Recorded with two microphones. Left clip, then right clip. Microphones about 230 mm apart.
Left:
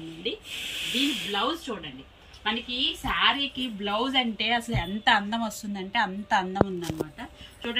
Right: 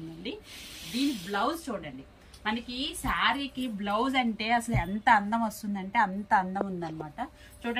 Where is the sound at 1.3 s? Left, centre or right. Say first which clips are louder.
Left 2 dB; centre.